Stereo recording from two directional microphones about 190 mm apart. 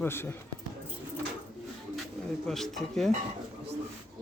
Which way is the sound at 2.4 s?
Centre (ahead or behind).